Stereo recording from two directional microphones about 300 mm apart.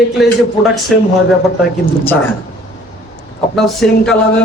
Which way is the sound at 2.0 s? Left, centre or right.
Centre.